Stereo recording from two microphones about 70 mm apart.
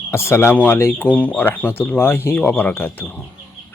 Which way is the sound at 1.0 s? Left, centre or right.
Left.